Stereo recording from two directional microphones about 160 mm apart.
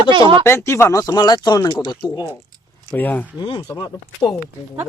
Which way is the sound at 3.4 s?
30° left (ahead or behind).